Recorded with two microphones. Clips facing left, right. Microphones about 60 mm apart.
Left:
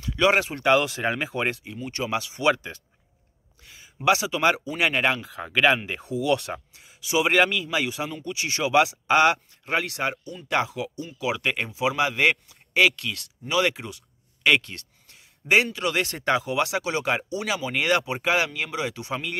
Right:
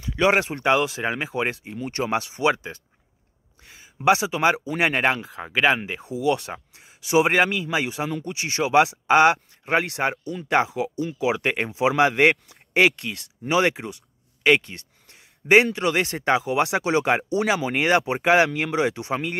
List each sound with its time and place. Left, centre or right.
0.0 s a sound: centre
0.7 s speech: centre
1.9 s speech: right
2.4 s speech: centre
3.7 s speech: right
5.4 s speech: centre
5.9 s speech: centre
6.7 s a sound: right
7.3 s speech: right
14.4 s speech: centre
15.0 s a man's voice: right